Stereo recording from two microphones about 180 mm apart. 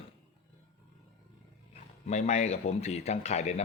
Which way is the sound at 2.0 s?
40° left (ahead or behind).